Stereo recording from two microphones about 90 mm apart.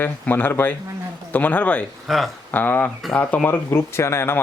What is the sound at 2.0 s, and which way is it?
Speech, centre (ahead or behind).